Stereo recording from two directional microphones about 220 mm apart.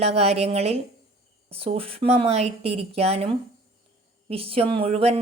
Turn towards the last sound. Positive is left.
turn(degrees=-30)  # may be behind; listen again after turning